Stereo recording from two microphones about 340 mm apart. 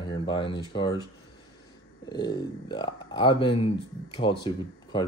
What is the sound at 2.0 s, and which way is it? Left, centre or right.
Speech, centre.